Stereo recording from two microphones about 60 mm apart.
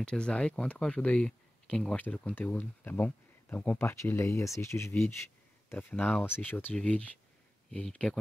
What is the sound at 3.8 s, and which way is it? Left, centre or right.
Speech, left.